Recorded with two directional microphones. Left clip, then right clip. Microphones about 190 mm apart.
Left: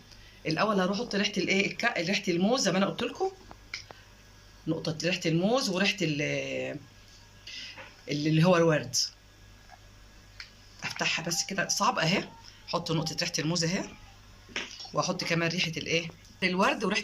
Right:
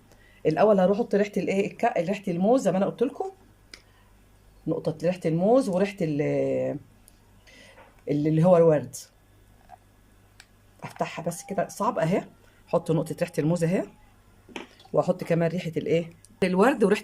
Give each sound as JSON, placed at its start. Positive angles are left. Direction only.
{"t": 0.4, "sound": "speech", "side_deg": -45}
{"t": 4.7, "sound": "speech", "side_deg": -35}
{"t": 8.0, "sound": "speech", "side_deg": -35}
{"t": 10.8, "sound": "speech", "side_deg": -40}
{"t": 14.9, "sound": "speech", "side_deg": -45}